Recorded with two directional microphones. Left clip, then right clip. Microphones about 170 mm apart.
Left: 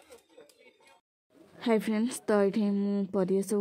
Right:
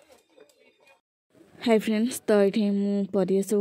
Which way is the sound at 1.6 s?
25° right (ahead or behind).